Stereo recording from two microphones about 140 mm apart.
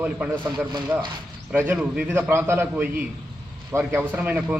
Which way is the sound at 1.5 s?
10° right (ahead or behind).